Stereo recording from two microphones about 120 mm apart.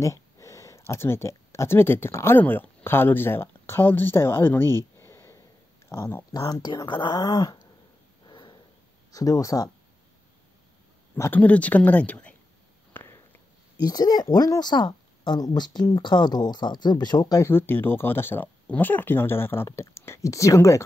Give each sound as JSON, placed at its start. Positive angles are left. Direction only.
{"t": 0.0, "sound": "speech", "side_deg": 25}
{"t": 6.3, "sound": "speech", "side_deg": 35}
{"t": 8.3, "sound": "a sound", "side_deg": 40}
{"t": 9.1, "sound": "speech", "side_deg": 30}
{"t": 11.1, "sound": "speech", "side_deg": 15}
{"t": 12.9, "sound": "a sound", "side_deg": 15}
{"t": 13.7, "sound": "speech", "side_deg": 35}
{"t": 17.5, "sound": "speech", "side_deg": 20}